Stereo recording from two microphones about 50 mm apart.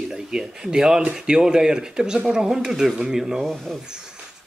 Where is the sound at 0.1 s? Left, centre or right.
Centre.